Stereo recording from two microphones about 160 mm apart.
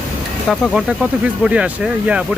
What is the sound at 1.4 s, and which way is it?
Speech, 5° right (ahead or behind).